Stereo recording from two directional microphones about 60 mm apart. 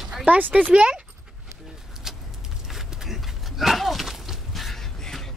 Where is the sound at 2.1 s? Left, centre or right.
Centre.